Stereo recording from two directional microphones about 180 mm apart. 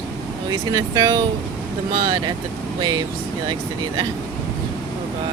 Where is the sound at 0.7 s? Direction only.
20° right (ahead or behind).